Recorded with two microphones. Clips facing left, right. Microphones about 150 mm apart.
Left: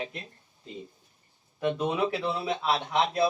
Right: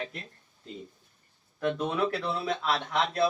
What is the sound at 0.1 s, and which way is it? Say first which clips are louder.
Speech: left 2 dB; 5° left (ahead or behind).